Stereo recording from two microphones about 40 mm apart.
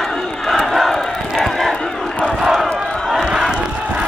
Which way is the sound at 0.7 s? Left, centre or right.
Centre.